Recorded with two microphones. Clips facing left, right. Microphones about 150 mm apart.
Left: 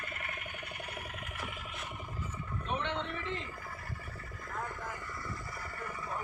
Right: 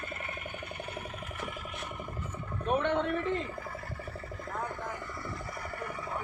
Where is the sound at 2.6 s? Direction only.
50° right (ahead or behind).